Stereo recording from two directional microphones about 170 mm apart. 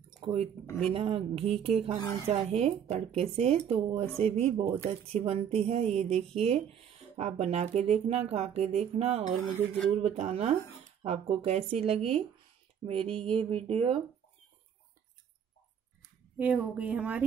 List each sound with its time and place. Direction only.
0.2 s speech: 35° right (ahead or behind)
16.3 s a woman's voice: 10° right (ahead or behind)